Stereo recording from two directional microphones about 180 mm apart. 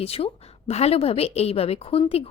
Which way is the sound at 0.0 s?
35° left (ahead or behind).